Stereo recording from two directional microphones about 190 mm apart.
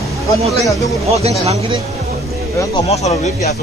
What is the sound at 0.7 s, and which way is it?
Speech, 15° left (ahead or behind).